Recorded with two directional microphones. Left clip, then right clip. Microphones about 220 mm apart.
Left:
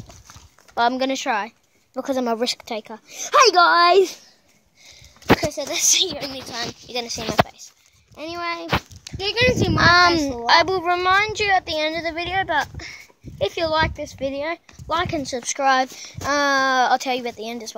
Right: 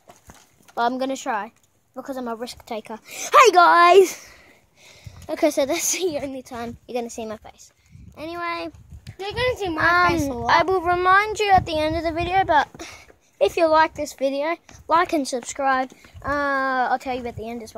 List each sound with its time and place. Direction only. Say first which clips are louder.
0.7 s speech: left 3 dB; 20° left (ahead or behind)
2.0 s speech: left 7 dB; 50° left (ahead or behind)
3.1 s speech: right 1 dB; 15° right (ahead or behind)
5.4 s a woman's voice: right 3 dB; 50° right (ahead or behind)
6.3 s speech: left 3 dB; 35° right (ahead or behind)
7.4 s a child's voice: left 3 dB; 5° left (ahead or behind)
9.2 s a child's voice: left 5 dB; 60° left (ahead or behind)
9.8 s a child's voice: left 3 dB; 15° left (ahead or behind); by 13.7 s 20° right (ahead or behind)
13.7 s speech: right 3 dB; 10° right (ahead or behind)
15.3 s speech: left 6 dB; 10° left (ahead or behind)